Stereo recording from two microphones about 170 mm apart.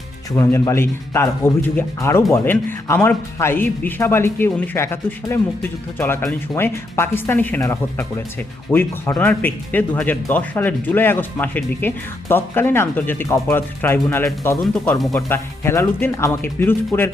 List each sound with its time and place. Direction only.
0.3 s speech: 15° left (ahead or behind)
15.3 s speech: 15° left (ahead or behind)